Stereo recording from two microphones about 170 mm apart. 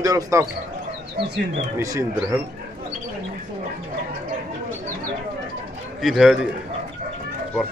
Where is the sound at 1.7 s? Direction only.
20° right (ahead or behind).